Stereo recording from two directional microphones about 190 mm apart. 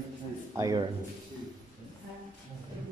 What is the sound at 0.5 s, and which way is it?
Speech, 20° right (ahead or behind).